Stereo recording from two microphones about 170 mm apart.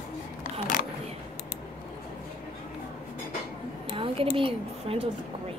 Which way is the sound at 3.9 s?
30° right (ahead or behind).